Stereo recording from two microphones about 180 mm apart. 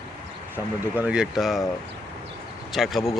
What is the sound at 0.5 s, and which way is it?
Speech, 10° right (ahead or behind).